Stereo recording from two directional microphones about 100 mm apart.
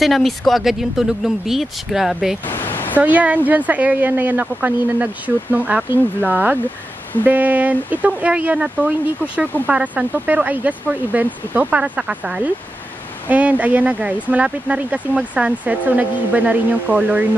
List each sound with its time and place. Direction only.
0.0 s speech: centre (ahead or behind)
2.4 s a sound: 20° left (ahead or behind)
3.0 s speech: 15° right (ahead or behind)